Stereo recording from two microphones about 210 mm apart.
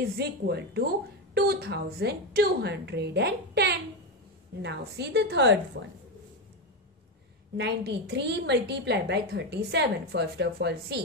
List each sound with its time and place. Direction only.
0.0 s a woman's voice: 50° right (ahead or behind)
7.5 s a woman's voice: 50° right (ahead or behind)